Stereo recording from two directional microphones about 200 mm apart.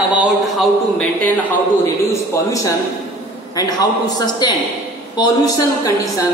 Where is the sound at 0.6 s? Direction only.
5° left (ahead or behind).